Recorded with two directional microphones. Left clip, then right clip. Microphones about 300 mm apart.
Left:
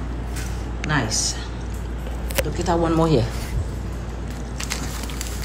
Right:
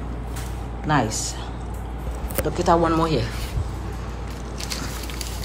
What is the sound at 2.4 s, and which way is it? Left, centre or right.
Speech, centre.